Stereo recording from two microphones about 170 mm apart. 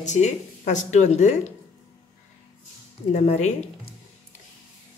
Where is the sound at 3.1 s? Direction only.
40° left (ahead or behind).